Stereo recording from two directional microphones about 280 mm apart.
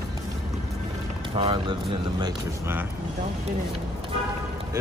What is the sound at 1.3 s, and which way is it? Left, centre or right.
Speech, centre.